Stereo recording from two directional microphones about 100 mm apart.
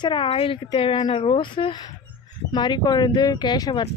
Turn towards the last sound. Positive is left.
turn(degrees=45)  # may be behind; listen again after turning